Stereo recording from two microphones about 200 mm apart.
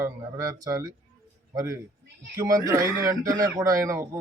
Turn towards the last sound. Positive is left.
turn(degrees=-15)  # may be behind; listen again after turning